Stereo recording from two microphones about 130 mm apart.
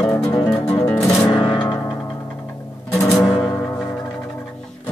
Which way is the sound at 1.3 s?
35° left (ahead or behind).